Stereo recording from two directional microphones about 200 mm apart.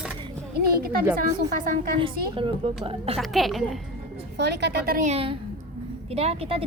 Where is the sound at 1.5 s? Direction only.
45° right (ahead or behind).